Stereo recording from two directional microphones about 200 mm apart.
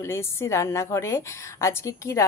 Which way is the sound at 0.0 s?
15° left (ahead or behind).